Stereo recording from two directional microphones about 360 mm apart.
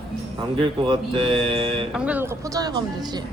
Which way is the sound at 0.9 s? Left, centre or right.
Centre.